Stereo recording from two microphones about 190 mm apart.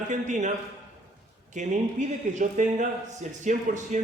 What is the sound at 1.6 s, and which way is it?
A man's voice, 40° right (ahead or behind).